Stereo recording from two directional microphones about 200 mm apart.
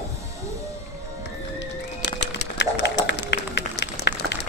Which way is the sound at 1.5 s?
60° left (ahead or behind).